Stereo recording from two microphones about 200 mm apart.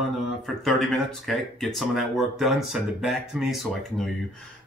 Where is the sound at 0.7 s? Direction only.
Centre (ahead or behind).